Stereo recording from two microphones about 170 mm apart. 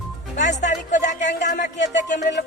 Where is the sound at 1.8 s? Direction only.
90° left.